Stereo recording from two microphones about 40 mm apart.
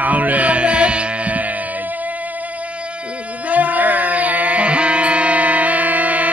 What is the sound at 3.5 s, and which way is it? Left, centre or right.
Music, right.